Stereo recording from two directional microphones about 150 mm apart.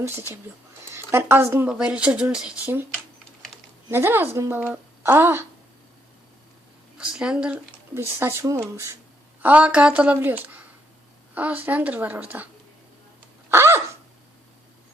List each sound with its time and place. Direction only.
0.0 s speech: 15° right (ahead or behind)
3.8 s speech: 15° right (ahead or behind)
7.0 s speech: 5° right (ahead or behind)
9.4 s speech: 10° right (ahead or behind)
13.5 s a sound: 15° right (ahead or behind)